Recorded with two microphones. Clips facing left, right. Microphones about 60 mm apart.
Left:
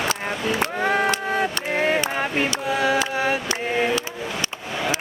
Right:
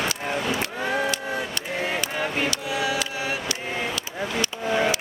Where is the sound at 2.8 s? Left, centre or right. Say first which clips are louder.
Left 7 dB; left.